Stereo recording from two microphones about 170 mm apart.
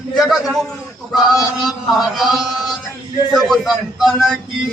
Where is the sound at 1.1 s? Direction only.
25° left (ahead or behind).